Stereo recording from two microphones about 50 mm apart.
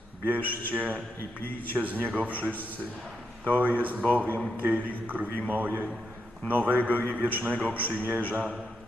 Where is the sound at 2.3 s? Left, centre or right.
Left.